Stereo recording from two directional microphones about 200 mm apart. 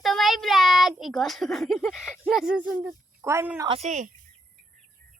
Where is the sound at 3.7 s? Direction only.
35° right (ahead or behind).